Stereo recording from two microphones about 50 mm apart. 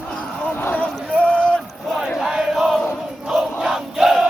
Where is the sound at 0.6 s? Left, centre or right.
Left.